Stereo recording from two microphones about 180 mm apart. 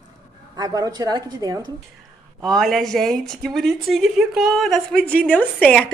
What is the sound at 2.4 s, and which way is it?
A woman's voice, centre (ahead or behind).